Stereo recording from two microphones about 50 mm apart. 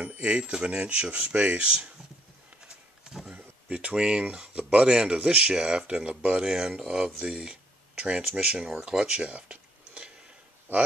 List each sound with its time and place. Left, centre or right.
0.0 s speech: right
3.0 s a sound: centre
3.3 s a sound: right
4.8 s speech: centre
8.9 s tick-tock: centre
10.7 s speech: right